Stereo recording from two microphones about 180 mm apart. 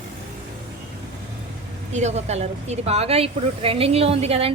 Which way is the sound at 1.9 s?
40° right (ahead or behind).